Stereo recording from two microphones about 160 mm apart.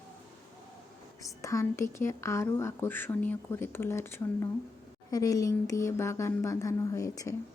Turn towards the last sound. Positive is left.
turn(degrees=20)  # may be behind; listen again after turning